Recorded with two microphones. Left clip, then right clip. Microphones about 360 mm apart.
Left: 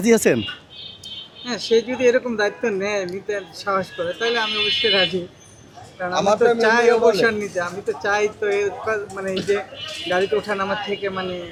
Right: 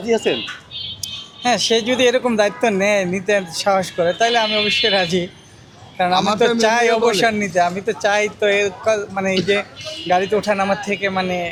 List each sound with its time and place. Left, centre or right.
0.0 s speech: left
1.0 s a man's voice: right
6.1 s a man's voice: right
6.6 s a man's voice: right